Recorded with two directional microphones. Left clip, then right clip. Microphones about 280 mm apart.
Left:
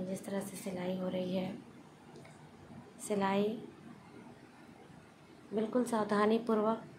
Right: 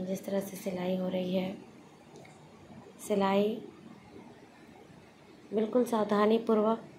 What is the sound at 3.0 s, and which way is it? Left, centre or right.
Speech, centre.